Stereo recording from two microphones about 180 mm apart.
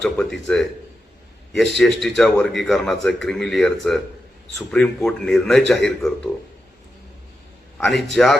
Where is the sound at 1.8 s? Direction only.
Centre (ahead or behind).